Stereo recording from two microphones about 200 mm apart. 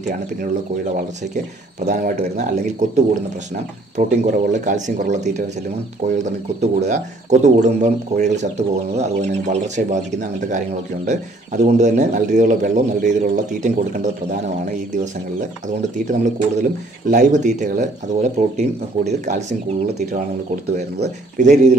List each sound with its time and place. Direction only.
1.9 s speech: 40° right (ahead or behind)
11.1 s speech: 35° right (ahead or behind)
16.1 s speech: 40° right (ahead or behind)
20.6 s speech: 55° right (ahead or behind)
21.4 s speech: 40° right (ahead or behind)